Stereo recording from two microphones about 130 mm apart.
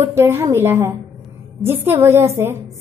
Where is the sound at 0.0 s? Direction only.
20° right (ahead or behind).